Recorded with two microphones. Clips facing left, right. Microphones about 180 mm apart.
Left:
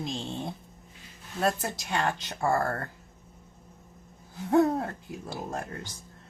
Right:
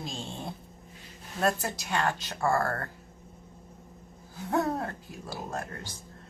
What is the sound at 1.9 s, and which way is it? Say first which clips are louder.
Speech: even; 20° left (ahead or behind).